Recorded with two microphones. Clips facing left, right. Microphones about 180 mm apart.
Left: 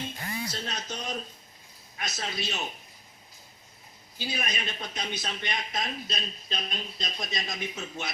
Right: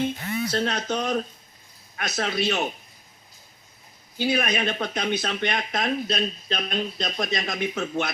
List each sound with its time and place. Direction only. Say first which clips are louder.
0.3 s speech: right 10 dB; 70° right (ahead or behind)
4.2 s speech: right 11 dB; 65° right (ahead or behind)